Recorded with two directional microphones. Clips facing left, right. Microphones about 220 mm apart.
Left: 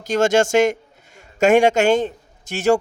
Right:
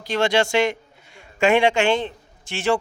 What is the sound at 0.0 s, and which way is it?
A man's voice, 45° left (ahead or behind).